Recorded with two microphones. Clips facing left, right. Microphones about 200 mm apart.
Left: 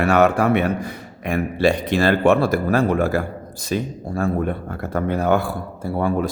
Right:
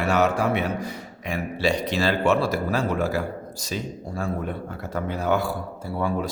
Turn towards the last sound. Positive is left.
turn(degrees=50)  # may be behind; listen again after turning